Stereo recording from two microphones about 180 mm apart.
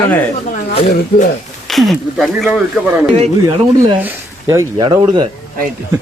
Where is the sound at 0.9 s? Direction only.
45° left (ahead or behind).